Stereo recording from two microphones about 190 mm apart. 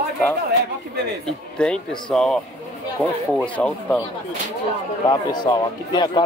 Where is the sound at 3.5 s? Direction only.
5° left (ahead or behind).